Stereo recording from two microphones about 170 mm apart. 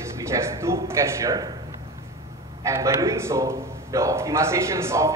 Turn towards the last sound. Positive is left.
turn(degrees=-15)  # may be behind; listen again after turning